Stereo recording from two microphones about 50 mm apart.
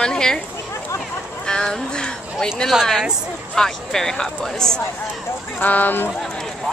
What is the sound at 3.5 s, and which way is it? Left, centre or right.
A woman's voice, centre.